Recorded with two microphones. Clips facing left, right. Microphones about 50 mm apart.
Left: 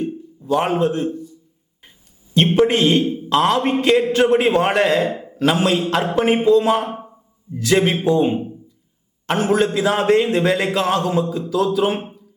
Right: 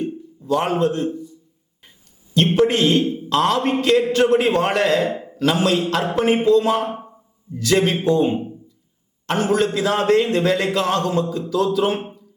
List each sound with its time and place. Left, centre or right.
0.0 s a sound: centre
2.3 s a man's voice: left; by 5.4 s centre
5.4 s a man's voice: centre